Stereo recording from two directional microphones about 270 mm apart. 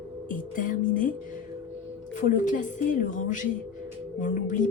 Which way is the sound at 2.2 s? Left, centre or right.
Left.